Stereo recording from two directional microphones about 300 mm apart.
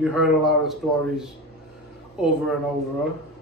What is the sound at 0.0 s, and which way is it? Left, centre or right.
A man's voice, centre.